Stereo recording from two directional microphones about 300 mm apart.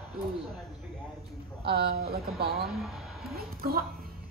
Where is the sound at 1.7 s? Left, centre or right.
Right.